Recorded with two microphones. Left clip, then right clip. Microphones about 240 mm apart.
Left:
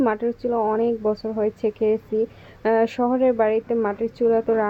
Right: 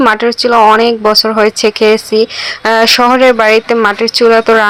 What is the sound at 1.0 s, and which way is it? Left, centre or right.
Speech, right.